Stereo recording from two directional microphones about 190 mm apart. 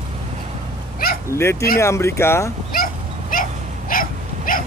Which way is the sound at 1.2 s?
15° left (ahead or behind).